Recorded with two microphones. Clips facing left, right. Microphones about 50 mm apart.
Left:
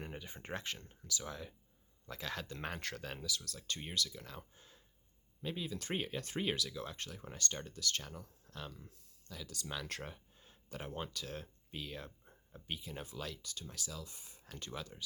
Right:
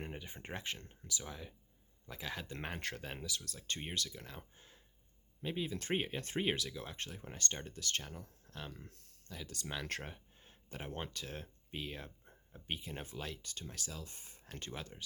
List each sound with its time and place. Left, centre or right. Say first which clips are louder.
0.3 s speech: left 1 dB; right
1.2 s speech: left 2 dB; centre; by 8.6 s right
8.9 s speech: right 2 dB; right
9.3 s speech: even; right